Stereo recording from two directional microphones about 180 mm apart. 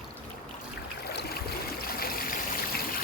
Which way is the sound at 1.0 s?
60° left (ahead or behind).